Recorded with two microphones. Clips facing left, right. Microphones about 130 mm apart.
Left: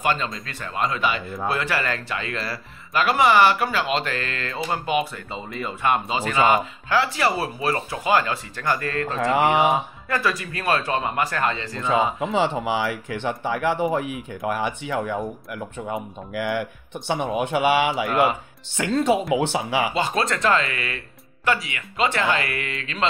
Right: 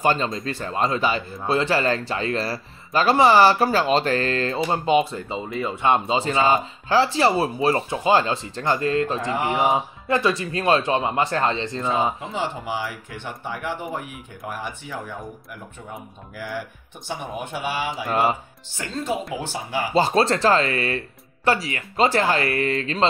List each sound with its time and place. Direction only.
0.0 s speech: 30° right (ahead or behind)
5.3 s speech: 5° right (ahead or behind)
5.8 s speech: 25° right (ahead or behind)
9.3 s speech: 70° left (ahead or behind)
9.7 s speech: 25° right (ahead or behind)
11.9 s speech: 90° left
19.9 s speech: 35° right (ahead or behind)